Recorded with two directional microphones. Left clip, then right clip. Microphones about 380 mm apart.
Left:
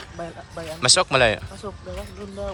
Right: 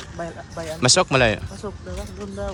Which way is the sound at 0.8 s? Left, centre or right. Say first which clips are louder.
Even; centre.